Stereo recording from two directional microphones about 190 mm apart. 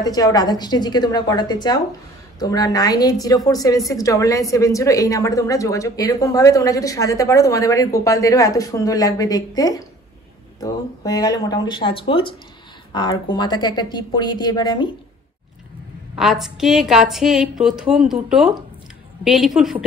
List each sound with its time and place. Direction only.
0.0 s a woman's voice: 20° left (ahead or behind)
16.2 s a woman's voice: centre (ahead or behind)